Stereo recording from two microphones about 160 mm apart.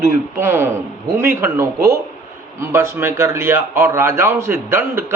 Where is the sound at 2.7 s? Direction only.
15° right (ahead or behind).